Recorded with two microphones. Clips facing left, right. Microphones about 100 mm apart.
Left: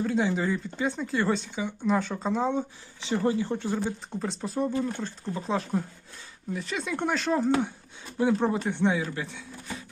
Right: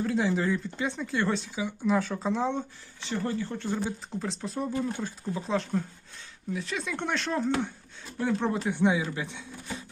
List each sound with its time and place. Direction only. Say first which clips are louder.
0.0 s speech: left 1 dB; centre (ahead or behind)
3.0 s speech: left 5 dB; 15° left (ahead or behind)
3.8 s speech: left 2 dB; centre (ahead or behind)
8.6 s speech: even; 10° right (ahead or behind)